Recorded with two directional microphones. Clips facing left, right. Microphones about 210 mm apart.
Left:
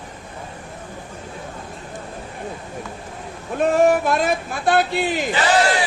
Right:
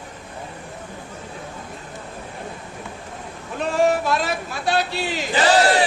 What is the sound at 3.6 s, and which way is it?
Speech, 50° left (ahead or behind).